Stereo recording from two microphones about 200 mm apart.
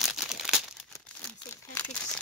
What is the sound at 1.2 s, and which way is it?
Speech, 5° left (ahead or behind).